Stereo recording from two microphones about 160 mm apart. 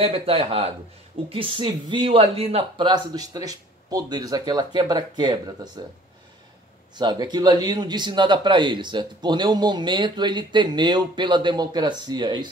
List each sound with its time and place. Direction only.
0.0 s a man's voice: 35° right (ahead or behind)
7.0 s a man's voice: 25° right (ahead or behind)